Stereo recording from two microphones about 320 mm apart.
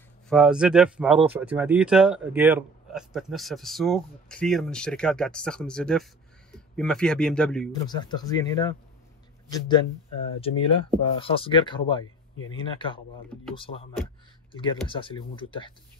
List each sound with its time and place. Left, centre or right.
0.3 s a man's voice: centre
7.7 s speech: centre